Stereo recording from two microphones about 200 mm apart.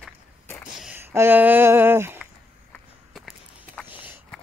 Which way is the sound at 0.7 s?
5° right (ahead or behind).